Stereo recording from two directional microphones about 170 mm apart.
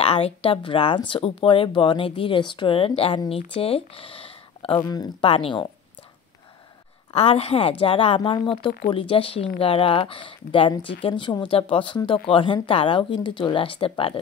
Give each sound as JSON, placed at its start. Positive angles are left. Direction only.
{"t": 0.0, "sound": "speech", "side_deg": 35}
{"t": 7.1, "sound": "speech", "side_deg": 35}